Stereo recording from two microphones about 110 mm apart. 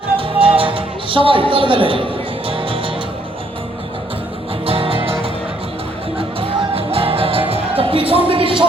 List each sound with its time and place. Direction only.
0.2 s music: 55° right (ahead or behind)
4.6 s music: 60° right (ahead or behind)
8.3 s a sound: 55° right (ahead or behind)